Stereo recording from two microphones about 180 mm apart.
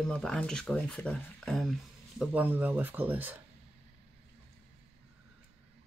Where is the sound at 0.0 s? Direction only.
5° left (ahead or behind).